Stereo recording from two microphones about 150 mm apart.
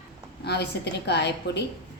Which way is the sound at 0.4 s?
90° left.